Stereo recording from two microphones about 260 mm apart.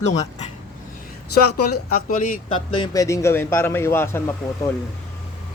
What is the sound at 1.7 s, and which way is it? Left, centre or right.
Speech, left.